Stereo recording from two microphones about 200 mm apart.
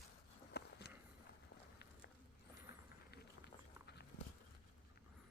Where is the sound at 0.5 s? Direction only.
55° left (ahead or behind).